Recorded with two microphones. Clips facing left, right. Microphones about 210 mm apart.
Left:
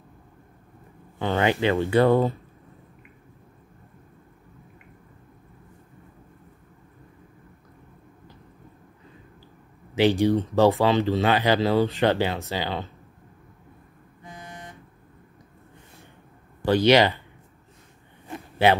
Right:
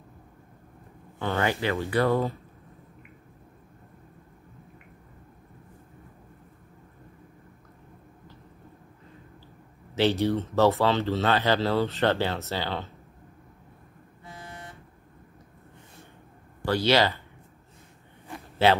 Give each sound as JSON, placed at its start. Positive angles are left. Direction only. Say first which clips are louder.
{"t": 1.2, "sound": "speech", "louder": "left 4 dB", "side_deg": 20}
{"t": 9.9, "sound": "speech", "louder": "left 4 dB", "side_deg": 15}
{"t": 14.2, "sound": "vehicle", "louder": "left 2 dB", "side_deg": 15}
{"t": 16.6, "sound": "speech", "louder": "left 5 dB", "side_deg": 20}
{"t": 18.3, "sound": "a sound", "louder": "left 2 dB", "side_deg": 15}